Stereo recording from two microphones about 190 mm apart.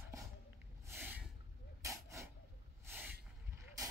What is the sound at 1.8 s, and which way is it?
Dog, 15° right (ahead or behind).